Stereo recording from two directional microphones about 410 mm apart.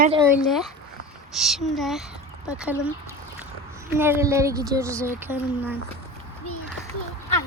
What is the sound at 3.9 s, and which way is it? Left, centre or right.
Speech, centre.